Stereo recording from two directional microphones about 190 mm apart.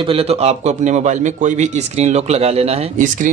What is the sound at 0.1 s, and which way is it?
A man's voice, 30° right (ahead or behind).